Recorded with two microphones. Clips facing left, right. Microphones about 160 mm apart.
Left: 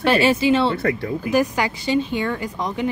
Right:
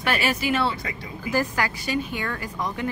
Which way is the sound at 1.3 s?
20° left (ahead or behind).